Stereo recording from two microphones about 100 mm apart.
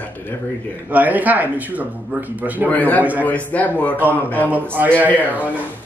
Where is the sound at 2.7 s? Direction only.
15° left (ahead or behind).